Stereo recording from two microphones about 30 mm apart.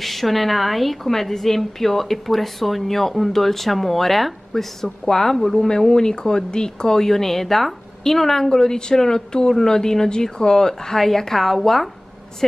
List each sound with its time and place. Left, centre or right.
0.0 s a woman's voice: centre
5.9 s speech: left